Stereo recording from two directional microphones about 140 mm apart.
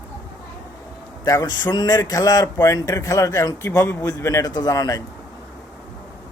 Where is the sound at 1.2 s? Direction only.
25° left (ahead or behind).